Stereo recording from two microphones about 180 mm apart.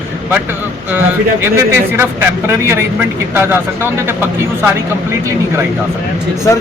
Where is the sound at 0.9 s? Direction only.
10° right (ahead or behind).